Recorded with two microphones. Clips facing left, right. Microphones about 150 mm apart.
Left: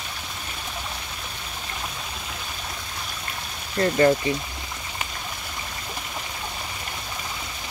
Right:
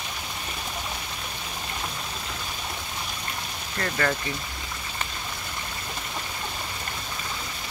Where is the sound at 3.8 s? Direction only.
25° left (ahead or behind).